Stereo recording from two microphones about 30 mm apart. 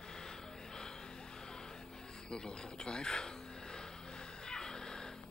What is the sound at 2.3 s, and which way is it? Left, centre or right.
Speech, left.